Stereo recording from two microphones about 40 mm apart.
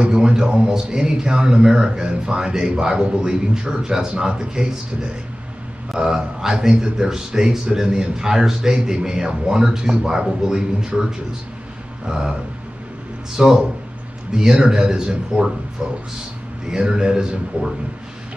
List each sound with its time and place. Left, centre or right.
0.1 s a man's voice: centre
5.9 s speech: centre
13.4 s speech: centre
16.7 s speech: centre